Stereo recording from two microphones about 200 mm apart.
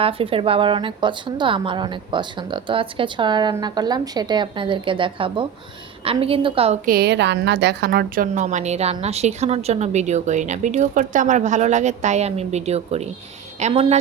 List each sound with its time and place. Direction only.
0.0 s a woman's voice: 25° right (ahead or behind)
6.8 s a woman's voice: 50° right (ahead or behind); by 14.0 s 35° right (ahead or behind)